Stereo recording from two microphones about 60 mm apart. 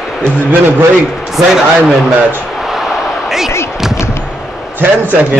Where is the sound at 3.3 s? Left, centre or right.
Centre.